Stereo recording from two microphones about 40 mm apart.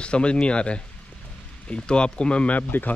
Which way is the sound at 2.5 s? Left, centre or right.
Left.